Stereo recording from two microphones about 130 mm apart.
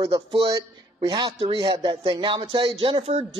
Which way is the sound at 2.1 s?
35° right (ahead or behind).